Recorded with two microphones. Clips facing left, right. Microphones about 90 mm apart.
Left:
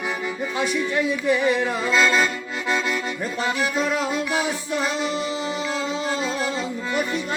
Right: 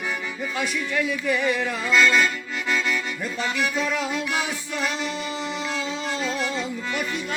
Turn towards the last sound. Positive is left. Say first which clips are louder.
# left 2 dB
turn(degrees=0)  # may be behind; listen again after turning